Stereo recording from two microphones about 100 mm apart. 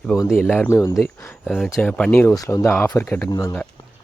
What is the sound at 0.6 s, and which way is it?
Speech, 25° left (ahead or behind).